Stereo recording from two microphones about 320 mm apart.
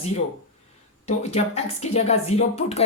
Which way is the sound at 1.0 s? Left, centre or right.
Centre.